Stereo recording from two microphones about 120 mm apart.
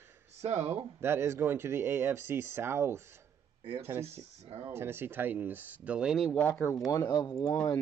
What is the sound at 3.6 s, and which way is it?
Speech, 50° right (ahead or behind).